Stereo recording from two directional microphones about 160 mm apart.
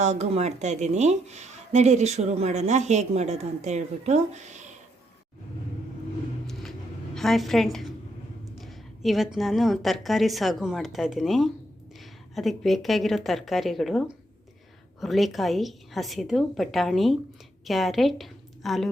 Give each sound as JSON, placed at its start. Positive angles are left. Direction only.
{"t": 0.0, "sound": "speech", "side_deg": -45}
{"t": 6.5, "sound": "a sound", "side_deg": 0}
{"t": 8.6, "sound": "a woman's voice", "side_deg": 0}
{"t": 15.0, "sound": "a woman's voice", "side_deg": 0}